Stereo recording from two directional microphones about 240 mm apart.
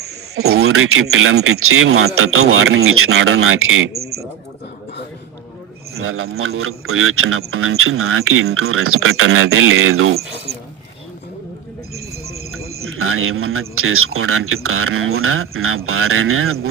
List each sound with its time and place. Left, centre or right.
0.5 s speech: right
6.0 s speech: right
12.3 s speech: right